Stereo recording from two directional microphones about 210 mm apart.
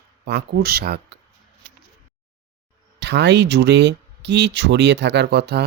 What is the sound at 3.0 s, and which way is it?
Speech, 55° right (ahead or behind).